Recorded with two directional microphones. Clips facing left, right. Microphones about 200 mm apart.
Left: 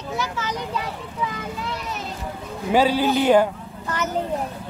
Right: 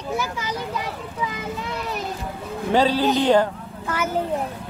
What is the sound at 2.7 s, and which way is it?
Speech, 10° left (ahead or behind).